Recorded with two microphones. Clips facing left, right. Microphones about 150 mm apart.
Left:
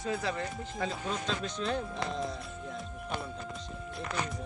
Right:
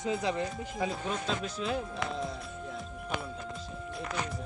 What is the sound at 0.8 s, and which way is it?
Speech, 5° right (ahead or behind).